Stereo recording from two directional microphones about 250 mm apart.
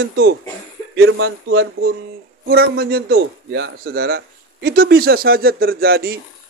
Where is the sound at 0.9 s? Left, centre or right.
Right.